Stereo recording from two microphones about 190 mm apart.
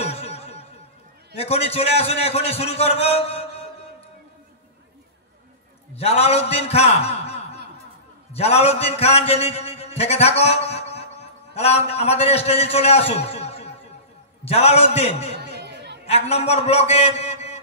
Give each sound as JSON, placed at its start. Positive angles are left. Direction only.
{"t": 0.0, "sound": "music", "side_deg": 35}
{"t": 1.3, "sound": "a man's voice", "side_deg": 30}
{"t": 5.9, "sound": "a man's voice", "side_deg": 35}
{"t": 15.5, "sound": "chatter", "side_deg": -60}
{"t": 16.1, "sound": "a man's voice", "side_deg": 30}